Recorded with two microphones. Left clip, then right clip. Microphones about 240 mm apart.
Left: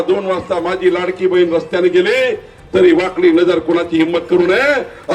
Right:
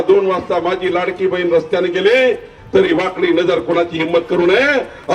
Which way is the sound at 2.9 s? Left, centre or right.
Left.